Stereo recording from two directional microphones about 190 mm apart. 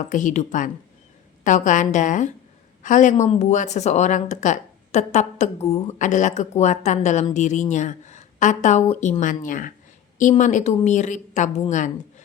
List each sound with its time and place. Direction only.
0.1 s speech: 40° left (ahead or behind)